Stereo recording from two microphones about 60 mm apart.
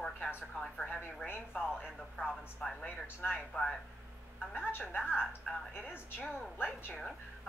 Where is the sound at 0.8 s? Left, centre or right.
Centre.